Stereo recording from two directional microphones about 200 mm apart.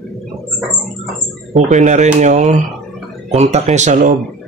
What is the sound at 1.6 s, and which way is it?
A man's voice, 35° right (ahead or behind).